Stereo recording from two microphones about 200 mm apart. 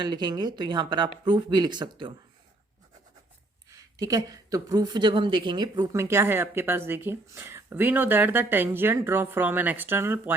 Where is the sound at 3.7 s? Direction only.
15° right (ahead or behind).